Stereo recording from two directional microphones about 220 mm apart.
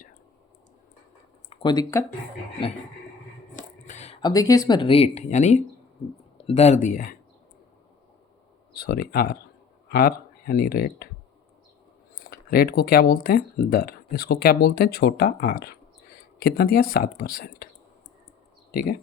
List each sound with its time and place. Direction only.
1.5 s speech: 20° left (ahead or behind)
3.5 s a sound: 35° left (ahead or behind)
4.2 s speech: 15° left (ahead or behind); by 7.2 s 35° left (ahead or behind)
8.7 s speech: 45° left (ahead or behind)
12.3 s speech: 45° left (ahead or behind)
18.7 s speech: 40° left (ahead or behind)